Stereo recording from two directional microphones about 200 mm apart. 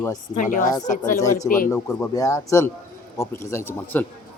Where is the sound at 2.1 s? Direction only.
15° left (ahead or behind).